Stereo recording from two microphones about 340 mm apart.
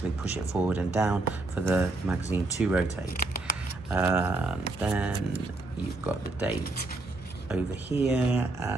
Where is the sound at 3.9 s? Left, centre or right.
Centre.